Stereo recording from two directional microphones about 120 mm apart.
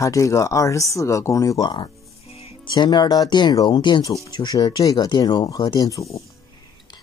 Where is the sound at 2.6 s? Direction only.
40° left (ahead or behind).